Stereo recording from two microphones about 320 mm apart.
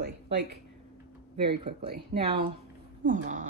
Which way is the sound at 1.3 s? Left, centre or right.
Centre.